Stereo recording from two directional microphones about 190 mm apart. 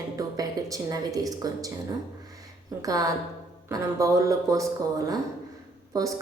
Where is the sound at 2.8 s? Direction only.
20° right (ahead or behind).